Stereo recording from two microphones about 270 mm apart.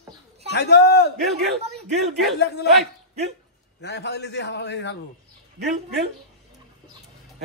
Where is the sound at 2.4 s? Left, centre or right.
Left.